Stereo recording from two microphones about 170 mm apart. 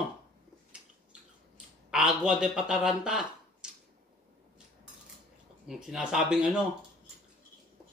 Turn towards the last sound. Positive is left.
turn(degrees=-5)  # may be behind; listen again after turning